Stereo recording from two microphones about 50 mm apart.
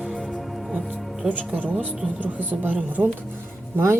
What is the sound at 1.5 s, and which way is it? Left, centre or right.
Speech, right.